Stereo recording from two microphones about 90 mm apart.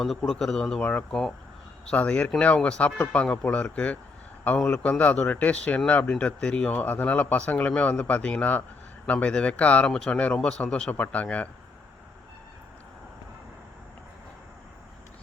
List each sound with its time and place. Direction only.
0.2 s speech: 5° left (ahead or behind)